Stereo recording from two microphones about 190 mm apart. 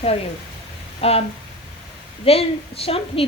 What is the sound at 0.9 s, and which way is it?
Speech, 30° left (ahead or behind).